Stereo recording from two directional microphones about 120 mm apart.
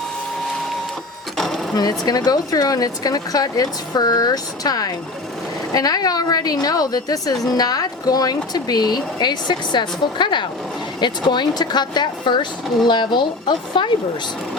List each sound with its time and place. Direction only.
1.4 s sewing machine: 5° left (ahead or behind)
1.7 s speech: 35° left (ahead or behind)